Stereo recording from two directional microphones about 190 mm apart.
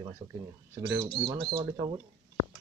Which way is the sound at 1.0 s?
25° right (ahead or behind).